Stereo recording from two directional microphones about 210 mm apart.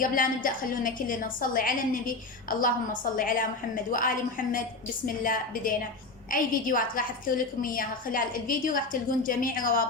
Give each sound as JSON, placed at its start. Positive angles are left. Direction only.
{"t": 0.0, "sound": "a woman's voice", "side_deg": 40}